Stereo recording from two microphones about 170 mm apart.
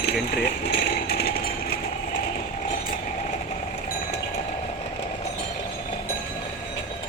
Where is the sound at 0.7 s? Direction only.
65° left (ahead or behind).